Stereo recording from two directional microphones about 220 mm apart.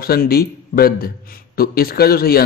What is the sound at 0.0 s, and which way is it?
A man's voice, 45° left (ahead or behind).